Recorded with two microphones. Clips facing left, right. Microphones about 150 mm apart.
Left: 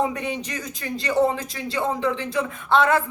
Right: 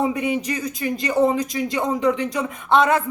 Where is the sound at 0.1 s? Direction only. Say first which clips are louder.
Right 6 dB; 10° right (ahead or behind).